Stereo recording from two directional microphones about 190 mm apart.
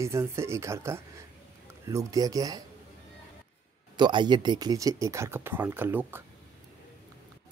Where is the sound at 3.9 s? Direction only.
25° right (ahead or behind).